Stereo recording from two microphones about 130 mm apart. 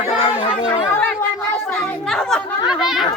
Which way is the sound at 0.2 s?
60° left (ahead or behind).